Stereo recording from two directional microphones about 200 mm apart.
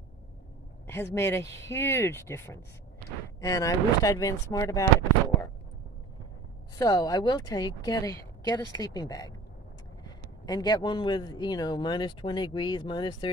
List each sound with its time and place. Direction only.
0.8 s speech: 10° left (ahead or behind)
6.8 s speech: 15° left (ahead or behind)